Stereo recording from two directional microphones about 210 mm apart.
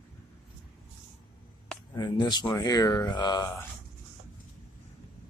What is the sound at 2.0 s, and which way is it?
Speech, 20° left (ahead or behind).